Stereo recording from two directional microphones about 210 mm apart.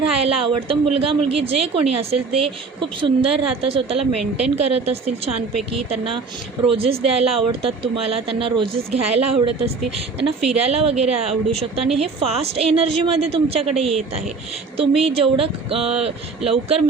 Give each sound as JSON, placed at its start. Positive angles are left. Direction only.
{"t": 0.1, "sound": "speech", "side_deg": -25}
{"t": 6.7, "sound": "speech", "side_deg": -25}